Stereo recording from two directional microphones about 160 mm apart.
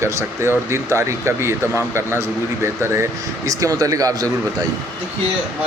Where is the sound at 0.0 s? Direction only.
15° right (ahead or behind).